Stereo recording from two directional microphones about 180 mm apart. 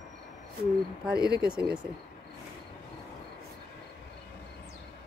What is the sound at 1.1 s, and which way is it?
Speech, 60° right (ahead or behind).